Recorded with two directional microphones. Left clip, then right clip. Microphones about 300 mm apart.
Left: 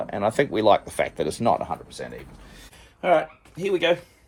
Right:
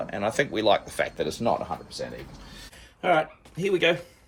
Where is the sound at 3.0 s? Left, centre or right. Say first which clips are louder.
Left 2 dB; centre.